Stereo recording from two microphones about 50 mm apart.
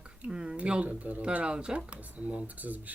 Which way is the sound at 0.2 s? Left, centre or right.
Centre.